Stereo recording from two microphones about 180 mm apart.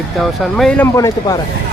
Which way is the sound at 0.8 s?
15° left (ahead or behind).